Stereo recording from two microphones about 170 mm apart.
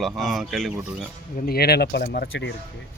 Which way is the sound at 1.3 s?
60° left (ahead or behind).